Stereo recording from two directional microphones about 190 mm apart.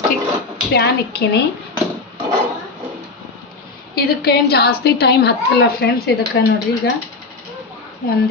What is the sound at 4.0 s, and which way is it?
A woman's voice, 55° left (ahead or behind).